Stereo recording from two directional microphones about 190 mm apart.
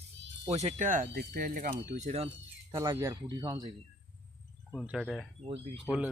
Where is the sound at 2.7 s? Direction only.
15° right (ahead or behind).